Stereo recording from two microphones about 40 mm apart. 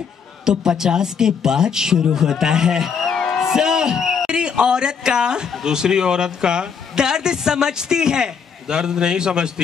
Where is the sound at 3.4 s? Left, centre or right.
Centre.